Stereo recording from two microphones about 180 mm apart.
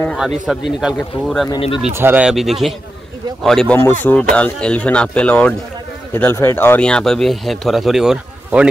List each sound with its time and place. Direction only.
0.0 s speech: 5° left (ahead or behind)
1.5 s speech: 25° left (ahead or behind)
2.0 s speech: 10° right (ahead or behind)